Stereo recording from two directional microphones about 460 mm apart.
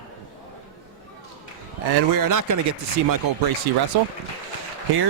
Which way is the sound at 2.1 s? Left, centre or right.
Right.